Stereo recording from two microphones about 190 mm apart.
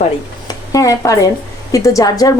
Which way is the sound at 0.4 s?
20° left (ahead or behind).